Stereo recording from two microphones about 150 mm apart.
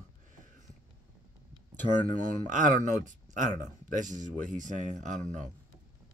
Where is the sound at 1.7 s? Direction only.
55° right (ahead or behind).